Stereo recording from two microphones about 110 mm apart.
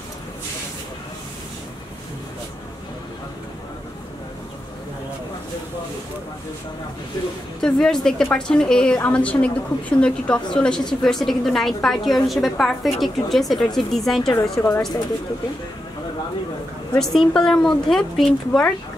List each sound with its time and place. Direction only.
7.6 s a woman's voice: 5° left (ahead or behind)
14.3 s a woman's voice: 25° left (ahead or behind)
17.0 s a woman's voice: 5° left (ahead or behind)